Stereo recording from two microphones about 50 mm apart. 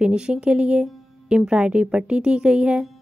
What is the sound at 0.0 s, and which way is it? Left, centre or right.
A woman's voice, centre.